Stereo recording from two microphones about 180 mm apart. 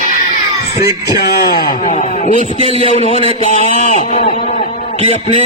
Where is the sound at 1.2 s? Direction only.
65° left (ahead or behind).